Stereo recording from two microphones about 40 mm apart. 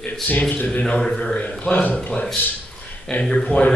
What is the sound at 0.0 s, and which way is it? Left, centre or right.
Speech, left.